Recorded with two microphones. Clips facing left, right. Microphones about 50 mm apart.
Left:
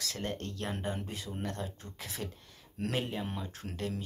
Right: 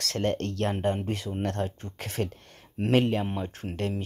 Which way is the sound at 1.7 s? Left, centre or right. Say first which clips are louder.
Right 9 dB; right.